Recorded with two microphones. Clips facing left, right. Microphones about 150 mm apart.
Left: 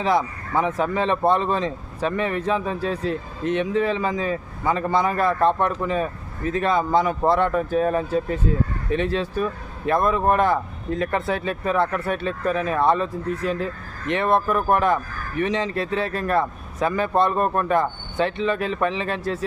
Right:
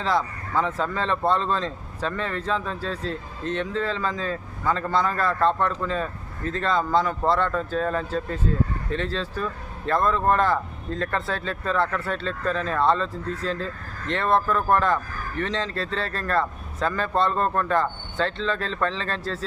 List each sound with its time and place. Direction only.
0.0 s speech: 15° left (ahead or behind)